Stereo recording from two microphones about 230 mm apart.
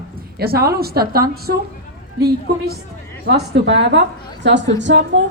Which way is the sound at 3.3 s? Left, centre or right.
Right.